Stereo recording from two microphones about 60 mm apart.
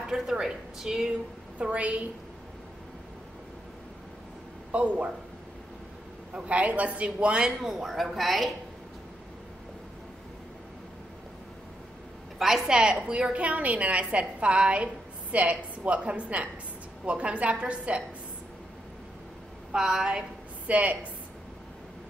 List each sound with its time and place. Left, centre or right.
0.1 s a woman's voice: centre
1.6 s a woman's voice: right
4.7 s a woman's voice: right
6.3 s a woman's voice: centre
7.6 s speech: centre
12.4 s a woman's voice: centre; by 18.0 s right
19.7 s a woman's voice: centre; by 21.1 s right